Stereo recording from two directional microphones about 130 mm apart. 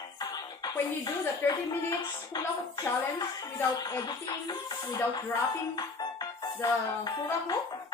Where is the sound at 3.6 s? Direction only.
30° left (ahead or behind).